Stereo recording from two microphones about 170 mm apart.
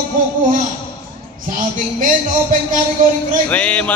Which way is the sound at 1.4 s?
50° right (ahead or behind).